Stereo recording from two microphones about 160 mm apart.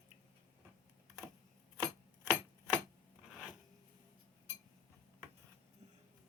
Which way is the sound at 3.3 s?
5° right (ahead or behind).